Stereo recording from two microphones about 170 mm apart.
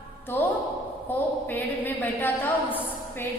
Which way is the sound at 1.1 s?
10° left (ahead or behind).